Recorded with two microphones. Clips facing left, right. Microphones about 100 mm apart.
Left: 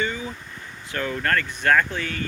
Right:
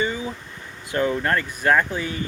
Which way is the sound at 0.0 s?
15° right (ahead or behind).